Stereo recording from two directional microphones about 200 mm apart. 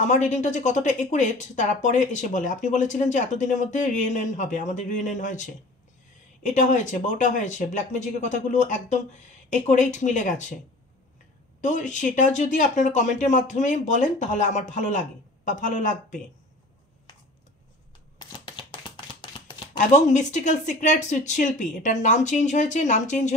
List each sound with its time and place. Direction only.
0.0 s a woman's voice: 35° left (ahead or behind)
11.6 s a woman's voice: 40° left (ahead or behind)
18.4 s shuffling cards: 25° left (ahead or behind)
19.8 s a woman's voice: 35° left (ahead or behind)